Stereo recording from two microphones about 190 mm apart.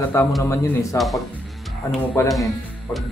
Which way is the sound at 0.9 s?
Centre (ahead or behind).